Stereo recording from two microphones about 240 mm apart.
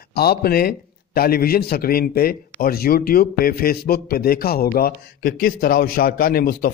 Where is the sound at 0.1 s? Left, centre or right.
Left.